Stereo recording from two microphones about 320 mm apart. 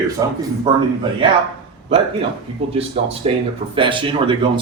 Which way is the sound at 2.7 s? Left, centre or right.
Centre.